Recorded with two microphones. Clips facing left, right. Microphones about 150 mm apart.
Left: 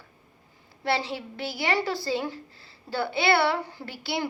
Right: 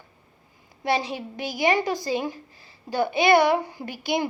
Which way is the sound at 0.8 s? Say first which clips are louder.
Right 2 dB; 15° right (ahead or behind).